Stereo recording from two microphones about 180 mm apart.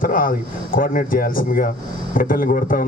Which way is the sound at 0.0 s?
50° left (ahead or behind).